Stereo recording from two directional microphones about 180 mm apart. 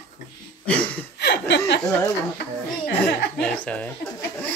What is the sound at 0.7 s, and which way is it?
Speech, 10° left (ahead or behind).